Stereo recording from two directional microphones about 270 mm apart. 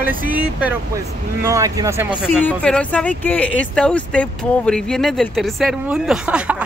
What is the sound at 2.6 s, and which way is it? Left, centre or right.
Speech, centre.